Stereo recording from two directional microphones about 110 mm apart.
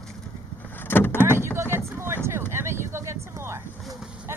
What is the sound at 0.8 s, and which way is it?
Vehicle, 20° left (ahead or behind).